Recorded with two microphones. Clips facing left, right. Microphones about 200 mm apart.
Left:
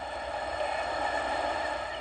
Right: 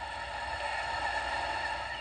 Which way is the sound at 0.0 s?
55° left (ahead or behind).